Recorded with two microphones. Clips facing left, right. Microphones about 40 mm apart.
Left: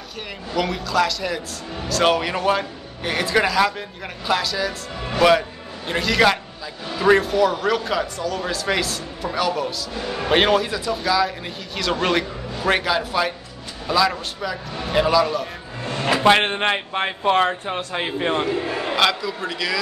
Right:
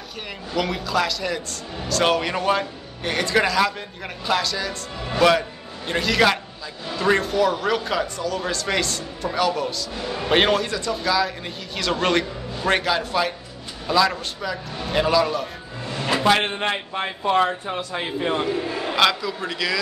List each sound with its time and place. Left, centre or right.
0.6 s a man's voice: centre
5.9 s a man's voice: centre
15.8 s a sound: left
16.3 s a man's voice: left
18.9 s a man's voice: centre